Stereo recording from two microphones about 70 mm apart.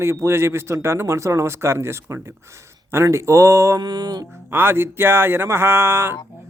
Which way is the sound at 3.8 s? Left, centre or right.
Right.